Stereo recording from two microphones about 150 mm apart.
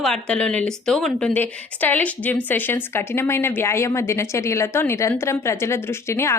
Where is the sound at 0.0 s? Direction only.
5° left (ahead or behind).